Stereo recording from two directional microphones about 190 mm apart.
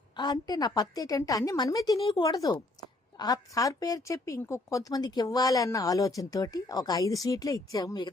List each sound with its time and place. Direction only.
0.2 s a woman's voice: 20° left (ahead or behind)